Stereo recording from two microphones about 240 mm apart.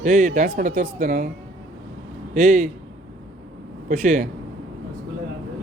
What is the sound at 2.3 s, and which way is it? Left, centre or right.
Speech, right.